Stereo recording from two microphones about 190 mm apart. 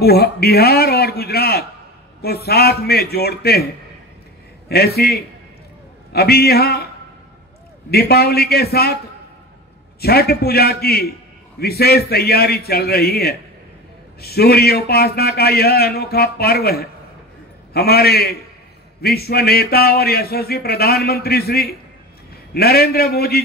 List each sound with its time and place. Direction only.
0.0 s a man's voice: 55° left (ahead or behind)
4.6 s a man's voice: 55° left (ahead or behind)
7.9 s a man's voice: 55° left (ahead or behind)
9.9 s a man's voice: 55° left (ahead or behind)